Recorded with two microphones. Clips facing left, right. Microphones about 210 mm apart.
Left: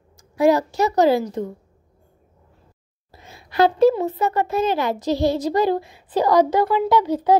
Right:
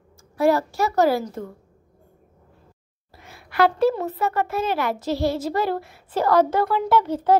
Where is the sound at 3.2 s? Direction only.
20° left (ahead or behind).